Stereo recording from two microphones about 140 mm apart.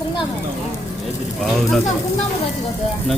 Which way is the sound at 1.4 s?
Centre (ahead or behind).